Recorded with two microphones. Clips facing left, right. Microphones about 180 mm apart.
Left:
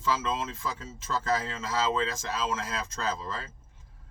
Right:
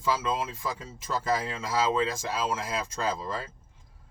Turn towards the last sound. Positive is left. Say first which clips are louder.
# right 2 dB
turn(degrees=-15)  # may be behind; listen again after turning